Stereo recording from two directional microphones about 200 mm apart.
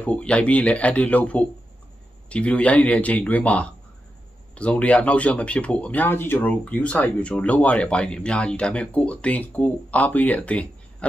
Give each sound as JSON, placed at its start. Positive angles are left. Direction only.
{"t": 0.0, "sound": "speech", "side_deg": 5}